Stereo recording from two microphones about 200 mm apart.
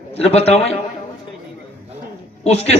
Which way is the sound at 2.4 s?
30° left (ahead or behind).